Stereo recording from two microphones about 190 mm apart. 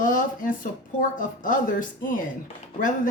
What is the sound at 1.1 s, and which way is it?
Speech, 45° left (ahead or behind).